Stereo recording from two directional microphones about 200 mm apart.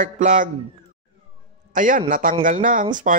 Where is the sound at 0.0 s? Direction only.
40° right (ahead or behind).